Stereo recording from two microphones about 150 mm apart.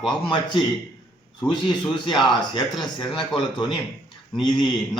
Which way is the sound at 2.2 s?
30° left (ahead or behind).